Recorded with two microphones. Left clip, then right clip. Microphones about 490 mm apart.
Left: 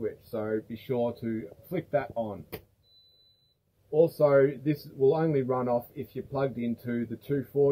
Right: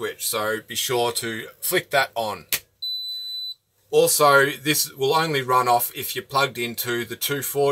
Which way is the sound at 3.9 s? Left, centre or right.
Right.